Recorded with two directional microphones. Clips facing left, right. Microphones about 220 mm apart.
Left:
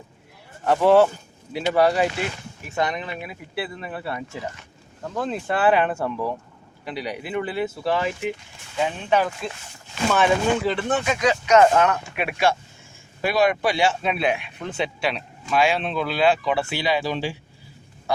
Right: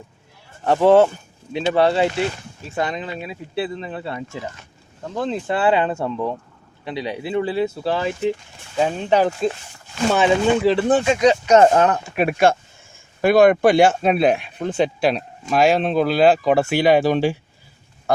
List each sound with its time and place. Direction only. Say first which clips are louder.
0.6 s speech: right 3 dB; 25° right (ahead or behind); by 17.3 s 50° right (ahead or behind)